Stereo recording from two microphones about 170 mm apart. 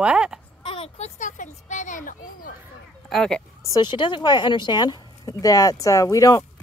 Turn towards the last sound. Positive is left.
turn(degrees=20)  # may be behind; listen again after turning